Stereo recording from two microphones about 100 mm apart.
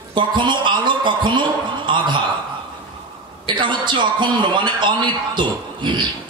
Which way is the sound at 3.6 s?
50° right (ahead or behind).